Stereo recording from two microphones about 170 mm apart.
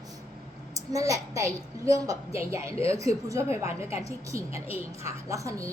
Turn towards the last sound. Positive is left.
turn(degrees=-20)  # may be behind; listen again after turning